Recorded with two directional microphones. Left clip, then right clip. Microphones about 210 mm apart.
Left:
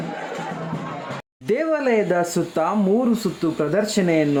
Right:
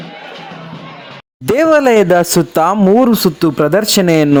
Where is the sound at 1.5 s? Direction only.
55° right (ahead or behind).